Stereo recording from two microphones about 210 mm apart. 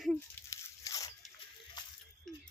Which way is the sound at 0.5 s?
15° left (ahead or behind).